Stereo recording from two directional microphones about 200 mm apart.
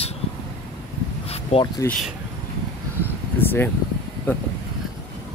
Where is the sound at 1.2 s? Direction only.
30° left (ahead or behind).